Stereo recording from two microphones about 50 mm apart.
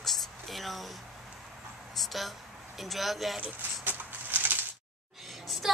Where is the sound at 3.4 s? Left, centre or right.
Right.